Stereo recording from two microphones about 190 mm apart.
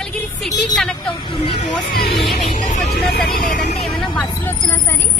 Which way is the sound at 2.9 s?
60° left (ahead or behind).